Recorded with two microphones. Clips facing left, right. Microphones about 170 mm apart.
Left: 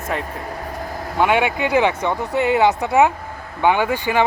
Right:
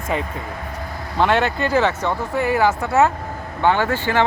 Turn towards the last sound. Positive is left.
turn(degrees=15)  # may be behind; listen again after turning